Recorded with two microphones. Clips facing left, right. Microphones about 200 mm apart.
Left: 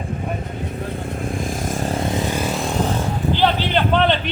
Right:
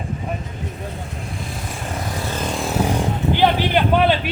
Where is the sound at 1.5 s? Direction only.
45° left (ahead or behind).